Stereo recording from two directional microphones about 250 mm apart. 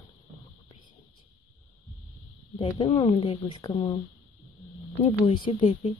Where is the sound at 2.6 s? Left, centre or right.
Left.